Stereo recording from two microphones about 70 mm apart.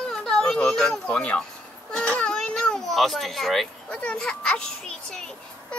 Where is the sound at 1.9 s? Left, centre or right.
Centre.